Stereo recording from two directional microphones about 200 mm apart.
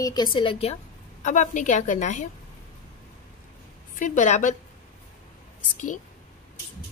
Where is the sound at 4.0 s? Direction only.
40° left (ahead or behind).